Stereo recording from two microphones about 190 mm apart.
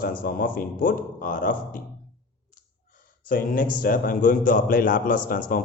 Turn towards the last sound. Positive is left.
turn(degrees=45)  # may be behind; listen again after turning